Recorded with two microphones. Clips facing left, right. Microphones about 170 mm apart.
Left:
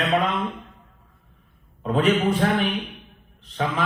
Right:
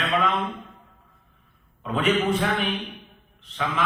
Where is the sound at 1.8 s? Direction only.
35° left (ahead or behind).